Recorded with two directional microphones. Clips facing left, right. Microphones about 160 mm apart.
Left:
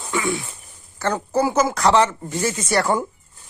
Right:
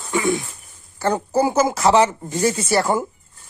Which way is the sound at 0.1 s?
45° right (ahead or behind).